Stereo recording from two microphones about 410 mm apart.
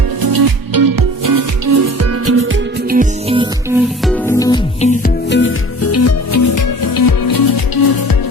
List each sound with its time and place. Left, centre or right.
0.2 s music: right; by 3.8 s centre
4.0 s music: centre; by 8.1 s left